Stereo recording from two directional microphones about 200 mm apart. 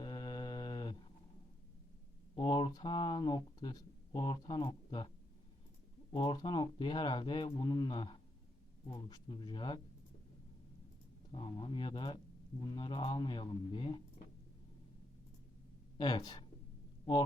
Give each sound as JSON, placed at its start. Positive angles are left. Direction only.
{"t": 0.0, "sound": "mantra", "side_deg": 20}
{"t": 2.3, "sound": "speech", "side_deg": 20}
{"t": 6.1, "sound": "speech", "side_deg": 20}
{"t": 11.3, "sound": "speech", "side_deg": 25}
{"t": 16.0, "sound": "speech", "side_deg": 20}